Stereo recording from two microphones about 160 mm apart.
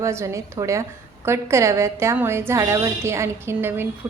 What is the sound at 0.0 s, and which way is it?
A woman's voice, 20° right (ahead or behind).